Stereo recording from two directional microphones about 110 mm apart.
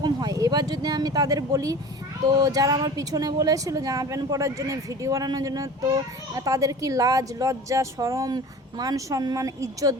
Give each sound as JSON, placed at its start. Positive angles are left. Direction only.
{"t": 0.0, "sound": "speech", "side_deg": -35}